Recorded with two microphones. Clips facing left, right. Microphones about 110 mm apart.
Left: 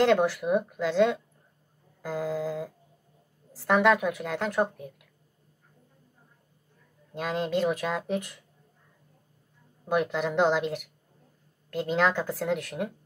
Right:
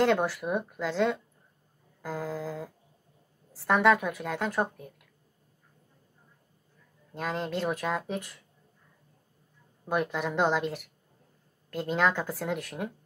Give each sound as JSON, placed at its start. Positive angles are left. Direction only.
{"t": 0.0, "sound": "a woman's voice", "side_deg": 0}
{"t": 7.2, "sound": "a woman's voice", "side_deg": 0}
{"t": 9.8, "sound": "a woman's voice", "side_deg": 0}